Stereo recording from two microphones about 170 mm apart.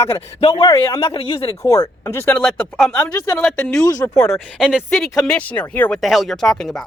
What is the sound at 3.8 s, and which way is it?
Speech, 20° left (ahead or behind).